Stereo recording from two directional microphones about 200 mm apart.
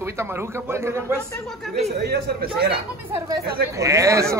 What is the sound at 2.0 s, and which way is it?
Speech, 50° right (ahead or behind).